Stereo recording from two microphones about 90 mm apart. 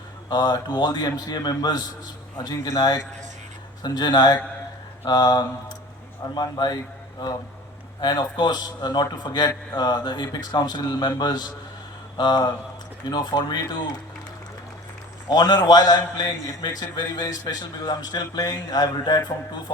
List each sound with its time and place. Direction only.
0.3 s a man's voice: 50° left (ahead or behind)
15.3 s a man's voice: 50° left (ahead or behind)
17.2 s a man's voice: 40° left (ahead or behind)